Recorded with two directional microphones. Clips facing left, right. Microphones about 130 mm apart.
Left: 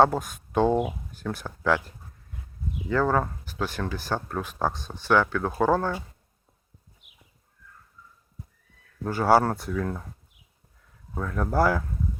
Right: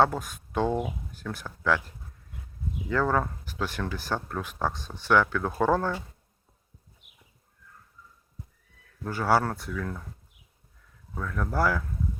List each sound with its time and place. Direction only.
0.0 s speech: 25° left (ahead or behind)
1.3 s speech: 35° left (ahead or behind)
2.9 s speech: 10° left (ahead or behind)
4.4 s speech: 20° left (ahead or behind)
9.0 s speech: 30° left (ahead or behind)
11.1 s speech: 30° left (ahead or behind)